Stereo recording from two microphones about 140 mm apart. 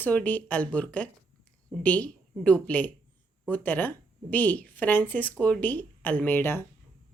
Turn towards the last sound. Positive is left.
turn(degrees=15)  # may be behind; listen again after turning